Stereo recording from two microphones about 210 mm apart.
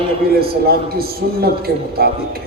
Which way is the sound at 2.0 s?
45° right (ahead or behind).